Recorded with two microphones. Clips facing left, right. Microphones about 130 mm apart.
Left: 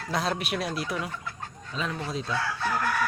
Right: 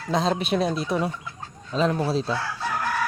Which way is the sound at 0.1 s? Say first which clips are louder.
Right 6 dB; 25° right (ahead or behind).